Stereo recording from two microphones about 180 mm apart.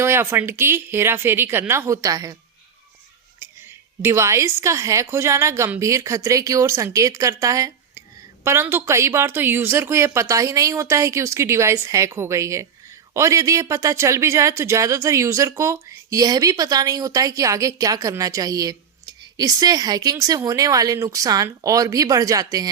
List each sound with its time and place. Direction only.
0.0 s a woman's voice: 15° right (ahead or behind)
3.4 s a woman's voice: 15° right (ahead or behind)